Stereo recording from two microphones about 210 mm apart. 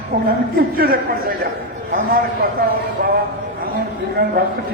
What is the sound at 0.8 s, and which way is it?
A man's voice, 45° right (ahead or behind).